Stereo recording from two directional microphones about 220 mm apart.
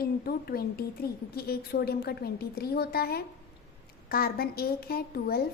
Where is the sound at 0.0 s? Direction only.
45° left (ahead or behind).